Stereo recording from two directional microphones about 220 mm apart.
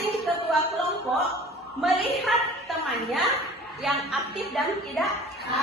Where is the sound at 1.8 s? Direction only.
Centre (ahead or behind).